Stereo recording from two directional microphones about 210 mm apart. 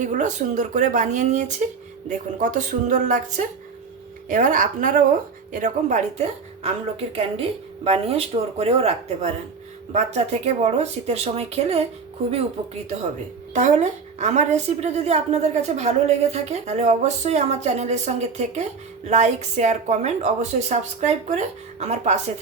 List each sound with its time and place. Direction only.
0.0 s a woman's voice: 35° right (ahead or behind)
13.5 s a woman's voice: 35° right (ahead or behind)